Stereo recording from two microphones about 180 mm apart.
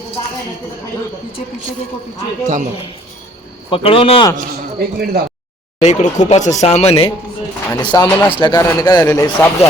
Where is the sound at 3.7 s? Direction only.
30° left (ahead or behind).